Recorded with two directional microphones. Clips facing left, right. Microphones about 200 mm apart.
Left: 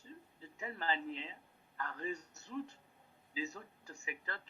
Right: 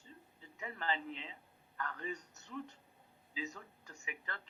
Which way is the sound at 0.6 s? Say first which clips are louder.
Left 1 dB; 35° left (ahead or behind).